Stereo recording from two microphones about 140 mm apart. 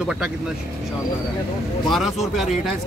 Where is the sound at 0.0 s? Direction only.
5° right (ahead or behind).